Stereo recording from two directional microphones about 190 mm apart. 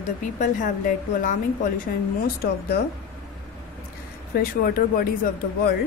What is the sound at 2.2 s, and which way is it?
Speech, 55° left (ahead or behind).